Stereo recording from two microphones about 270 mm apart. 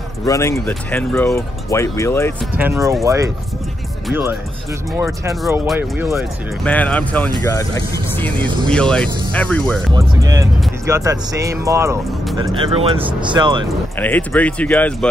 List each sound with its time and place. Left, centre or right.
0.2 s speech: centre
2.5 s speech: centre
6.6 s speech: centre
9.9 s speech: centre
13.9 s speech: centre